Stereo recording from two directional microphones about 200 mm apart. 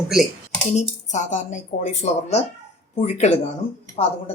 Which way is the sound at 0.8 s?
35° left (ahead or behind).